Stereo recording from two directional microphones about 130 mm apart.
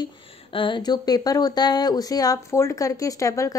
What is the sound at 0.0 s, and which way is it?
Speech, 40° left (ahead or behind).